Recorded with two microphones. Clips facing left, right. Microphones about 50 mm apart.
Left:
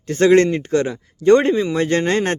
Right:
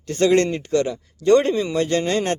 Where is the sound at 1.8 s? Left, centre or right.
Left.